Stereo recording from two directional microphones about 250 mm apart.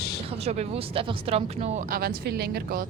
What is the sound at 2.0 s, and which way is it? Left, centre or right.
Speech, right.